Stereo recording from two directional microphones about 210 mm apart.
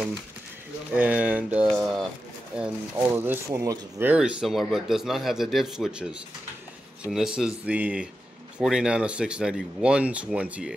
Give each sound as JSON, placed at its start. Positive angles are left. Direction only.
{"t": 0.9, "sound": "speech", "side_deg": -5}